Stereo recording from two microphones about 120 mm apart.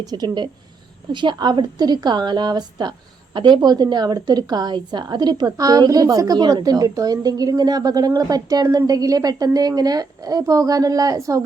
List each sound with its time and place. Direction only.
0.1 s a woman's voice: 35° right (ahead or behind)